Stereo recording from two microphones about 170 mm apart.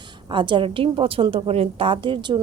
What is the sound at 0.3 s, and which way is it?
A woman's voice, 30° right (ahead or behind).